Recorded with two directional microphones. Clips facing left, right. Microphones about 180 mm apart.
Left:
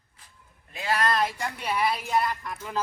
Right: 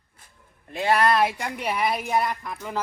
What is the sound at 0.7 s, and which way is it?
Speech, 60° right (ahead or behind).